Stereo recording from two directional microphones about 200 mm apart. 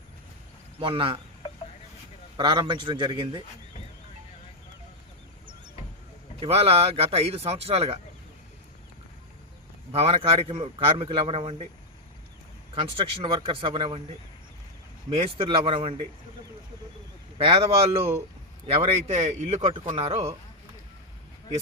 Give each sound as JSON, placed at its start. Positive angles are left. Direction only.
{"t": 0.8, "sound": "a man's voice", "side_deg": -25}
{"t": 2.4, "sound": "a man's voice", "side_deg": -25}
{"t": 6.4, "sound": "a man's voice", "side_deg": -30}
{"t": 9.9, "sound": "a man's voice", "side_deg": -30}
{"t": 12.7, "sound": "a man's voice", "side_deg": -25}
{"t": 15.1, "sound": "a man's voice", "side_deg": -25}
{"t": 17.3, "sound": "a man's voice", "side_deg": -30}